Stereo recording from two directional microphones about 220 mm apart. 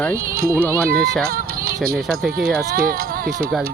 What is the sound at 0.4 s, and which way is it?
Speech, 10° right (ahead or behind).